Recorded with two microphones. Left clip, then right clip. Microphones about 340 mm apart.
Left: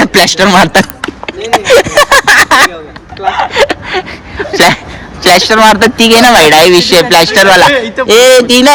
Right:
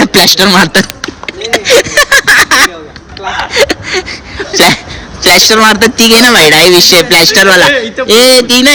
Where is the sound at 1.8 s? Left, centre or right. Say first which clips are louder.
Left 1 dB; centre.